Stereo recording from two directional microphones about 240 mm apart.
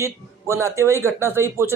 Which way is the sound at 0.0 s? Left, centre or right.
Centre.